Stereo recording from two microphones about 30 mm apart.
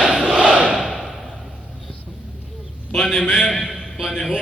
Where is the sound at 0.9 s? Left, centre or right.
Centre.